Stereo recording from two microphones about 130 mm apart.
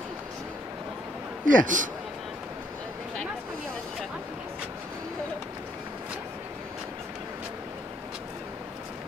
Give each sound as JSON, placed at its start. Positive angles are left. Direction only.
{"t": 1.4, "sound": "speech", "side_deg": -90}